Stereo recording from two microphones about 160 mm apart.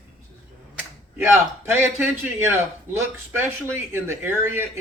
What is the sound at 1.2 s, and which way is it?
Speech, 15° right (ahead or behind).